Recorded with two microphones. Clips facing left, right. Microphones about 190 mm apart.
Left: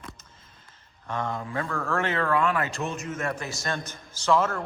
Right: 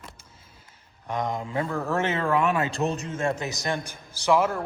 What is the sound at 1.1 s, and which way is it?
A man's voice, 15° right (ahead or behind).